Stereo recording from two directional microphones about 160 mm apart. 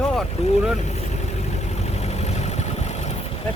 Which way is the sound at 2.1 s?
45° left (ahead or behind).